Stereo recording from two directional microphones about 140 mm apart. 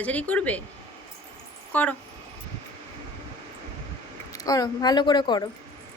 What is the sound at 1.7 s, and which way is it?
Speech, 10° left (ahead or behind).